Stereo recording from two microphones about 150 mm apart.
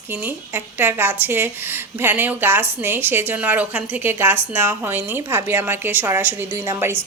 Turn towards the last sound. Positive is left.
turn(degrees=-15)  # may be behind; listen again after turning